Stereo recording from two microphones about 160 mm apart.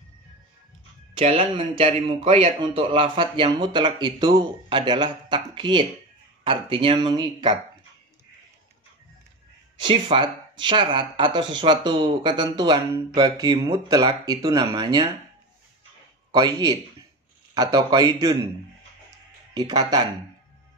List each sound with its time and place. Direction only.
1.1 s speech: 35° right (ahead or behind)
9.8 s speech: 30° right (ahead or behind)
16.3 s a man's voice: 25° right (ahead or behind)
19.5 s speech: 25° right (ahead or behind)